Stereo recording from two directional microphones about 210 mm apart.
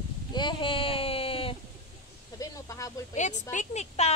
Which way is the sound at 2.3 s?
15° left (ahead or behind).